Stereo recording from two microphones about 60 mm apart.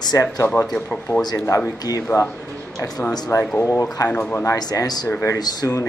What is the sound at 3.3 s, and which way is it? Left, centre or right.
Speech, left.